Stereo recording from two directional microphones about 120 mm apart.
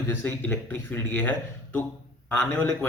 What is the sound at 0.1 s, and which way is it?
Speech, 15° left (ahead or behind).